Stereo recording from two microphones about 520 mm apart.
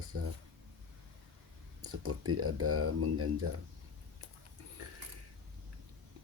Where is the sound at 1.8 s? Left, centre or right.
Right.